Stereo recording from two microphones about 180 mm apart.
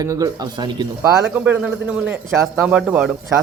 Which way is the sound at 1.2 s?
5° right (ahead or behind).